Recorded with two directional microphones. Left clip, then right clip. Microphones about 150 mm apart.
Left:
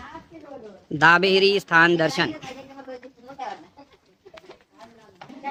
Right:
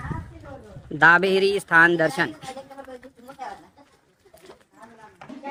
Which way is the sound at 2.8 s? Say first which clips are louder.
Left 1 dB; 35° right (ahead or behind).